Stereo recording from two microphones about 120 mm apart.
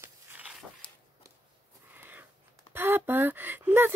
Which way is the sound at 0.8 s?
40° left (ahead or behind).